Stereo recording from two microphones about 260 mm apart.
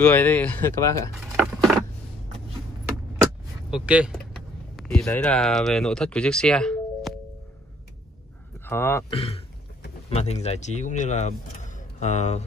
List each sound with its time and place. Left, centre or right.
0.0 s speech: centre
1.3 s a sound: centre
3.7 s speech: centre
8.6 s speech: centre
9.1 s speech: left